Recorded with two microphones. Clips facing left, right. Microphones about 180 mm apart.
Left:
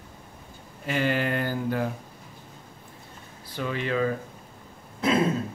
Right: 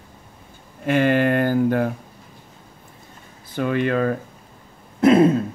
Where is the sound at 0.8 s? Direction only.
55° right (ahead or behind).